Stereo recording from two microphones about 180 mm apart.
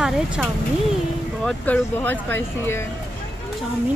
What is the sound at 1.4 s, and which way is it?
Speech, 10° left (ahead or behind).